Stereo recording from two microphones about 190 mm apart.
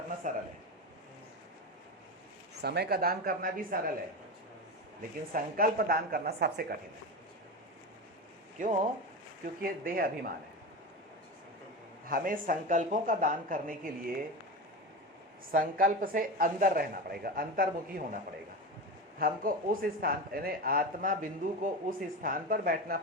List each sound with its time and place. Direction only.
0.2 s a man's voice: 40° right (ahead or behind)
2.6 s speech: 60° right (ahead or behind)
5.3 s speech: 50° right (ahead or behind)
8.6 s speech: 45° right (ahead or behind)
12.0 s speech: 45° right (ahead or behind)
15.5 s speech: 45° right (ahead or behind)
19.2 s speech: 45° right (ahead or behind)